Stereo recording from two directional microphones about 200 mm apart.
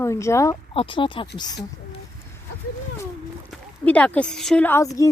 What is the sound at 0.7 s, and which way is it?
Speech, 25° left (ahead or behind).